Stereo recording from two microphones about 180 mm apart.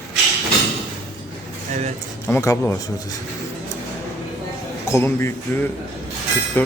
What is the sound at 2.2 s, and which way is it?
Speech, 15° left (ahead or behind).